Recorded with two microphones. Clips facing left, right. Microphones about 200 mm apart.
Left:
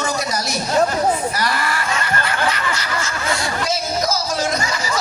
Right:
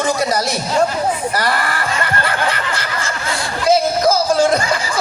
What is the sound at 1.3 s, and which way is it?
Snicker, 55° right (ahead or behind).